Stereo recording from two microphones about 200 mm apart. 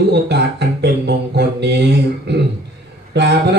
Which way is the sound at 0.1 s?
55° right (ahead or behind).